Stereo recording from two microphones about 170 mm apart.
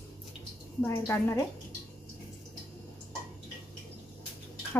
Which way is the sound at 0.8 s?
15° left (ahead or behind).